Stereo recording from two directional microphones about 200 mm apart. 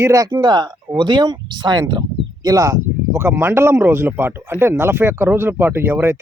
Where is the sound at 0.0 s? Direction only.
15° right (ahead or behind).